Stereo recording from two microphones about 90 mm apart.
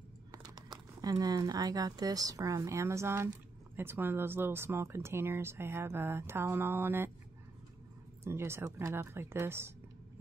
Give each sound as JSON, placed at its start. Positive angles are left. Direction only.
{"t": 0.3, "sound": "speech", "side_deg": -45}
{"t": 8.2, "sound": "speech", "side_deg": -30}